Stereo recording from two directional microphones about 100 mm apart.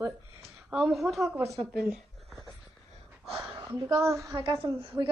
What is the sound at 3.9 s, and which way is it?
Speech, 30° right (ahead or behind).